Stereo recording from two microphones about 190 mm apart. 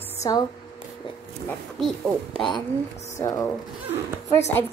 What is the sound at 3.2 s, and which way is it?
Speech, 15° left (ahead or behind).